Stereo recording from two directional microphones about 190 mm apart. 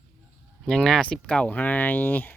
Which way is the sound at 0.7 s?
5° left (ahead or behind).